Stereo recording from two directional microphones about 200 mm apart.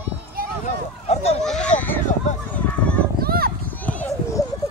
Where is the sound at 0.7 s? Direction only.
35° left (ahead or behind).